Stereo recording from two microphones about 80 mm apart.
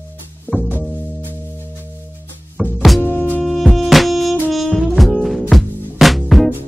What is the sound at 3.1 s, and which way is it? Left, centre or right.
Music, left.